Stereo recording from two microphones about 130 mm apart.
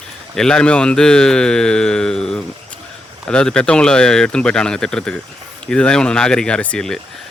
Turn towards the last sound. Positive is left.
turn(degrees=5)  # may be behind; listen again after turning